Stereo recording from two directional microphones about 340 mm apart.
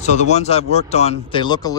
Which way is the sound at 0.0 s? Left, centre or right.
Centre.